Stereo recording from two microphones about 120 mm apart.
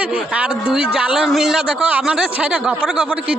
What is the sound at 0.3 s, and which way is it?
Speech, 10° right (ahead or behind).